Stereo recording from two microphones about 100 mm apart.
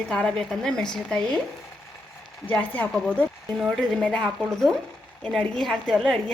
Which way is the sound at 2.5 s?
15° left (ahead or behind).